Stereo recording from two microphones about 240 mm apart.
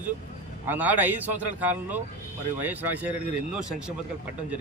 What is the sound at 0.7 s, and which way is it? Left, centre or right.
Speech, centre.